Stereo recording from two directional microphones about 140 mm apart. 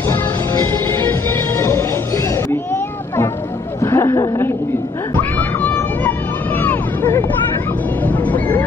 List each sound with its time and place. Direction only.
0.1 s music: 20° left (ahead or behind)
3.8 s speech: 20° left (ahead or behind)
5.1 s hubbub: 15° left (ahead or behind)
8.0 s speech: 10° left (ahead or behind)